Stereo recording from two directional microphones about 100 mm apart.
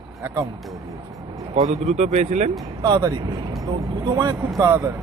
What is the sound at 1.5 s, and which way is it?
Speech, 90° right.